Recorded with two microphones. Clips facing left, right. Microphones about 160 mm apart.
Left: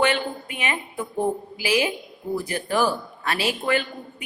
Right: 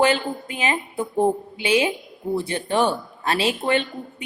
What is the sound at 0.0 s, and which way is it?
A man's voice, 30° right (ahead or behind).